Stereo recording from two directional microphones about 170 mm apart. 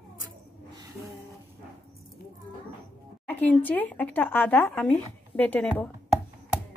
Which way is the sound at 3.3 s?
10° left (ahead or behind).